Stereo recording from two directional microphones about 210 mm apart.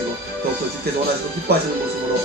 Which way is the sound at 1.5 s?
45° right (ahead or behind).